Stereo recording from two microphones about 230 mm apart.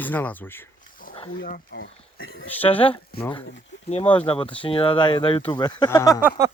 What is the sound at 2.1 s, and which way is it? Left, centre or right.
Speech, left.